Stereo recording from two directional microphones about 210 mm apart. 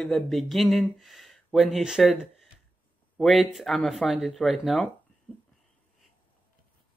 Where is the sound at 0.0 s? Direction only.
Centre (ahead or behind).